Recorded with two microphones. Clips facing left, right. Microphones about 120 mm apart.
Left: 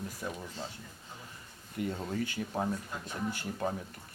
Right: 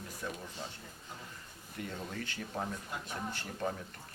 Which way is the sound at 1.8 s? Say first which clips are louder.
Left 7 dB; 10° left (ahead or behind).